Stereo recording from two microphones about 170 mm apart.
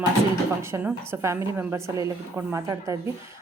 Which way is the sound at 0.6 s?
15° right (ahead or behind).